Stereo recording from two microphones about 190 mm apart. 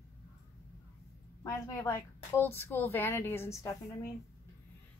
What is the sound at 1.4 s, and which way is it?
Speech, 15° left (ahead or behind).